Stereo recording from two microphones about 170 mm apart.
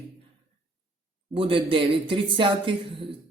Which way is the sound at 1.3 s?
30° right (ahead or behind).